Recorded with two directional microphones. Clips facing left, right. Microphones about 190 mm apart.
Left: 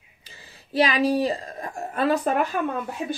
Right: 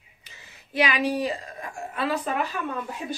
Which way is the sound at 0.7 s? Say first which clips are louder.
Left 4 dB; 35° left (ahead or behind).